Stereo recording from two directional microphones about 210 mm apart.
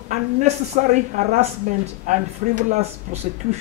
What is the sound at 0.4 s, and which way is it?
Speech, 35° right (ahead or behind).